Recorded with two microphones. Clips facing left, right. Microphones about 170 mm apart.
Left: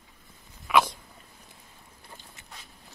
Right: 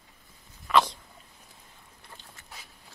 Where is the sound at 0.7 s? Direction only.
10° left (ahead or behind).